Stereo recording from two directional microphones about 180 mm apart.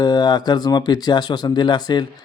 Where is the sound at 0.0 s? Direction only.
25° left (ahead or behind).